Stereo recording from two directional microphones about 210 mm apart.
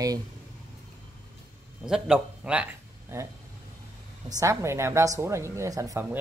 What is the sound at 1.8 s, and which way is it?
A man's voice, 5° right (ahead or behind).